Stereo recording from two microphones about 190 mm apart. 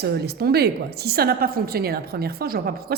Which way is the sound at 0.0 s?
55° right (ahead or behind).